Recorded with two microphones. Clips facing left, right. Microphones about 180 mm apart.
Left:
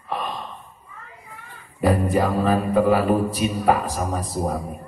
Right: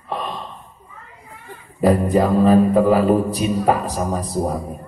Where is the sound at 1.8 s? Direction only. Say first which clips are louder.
Right 4 dB; 30° right (ahead or behind).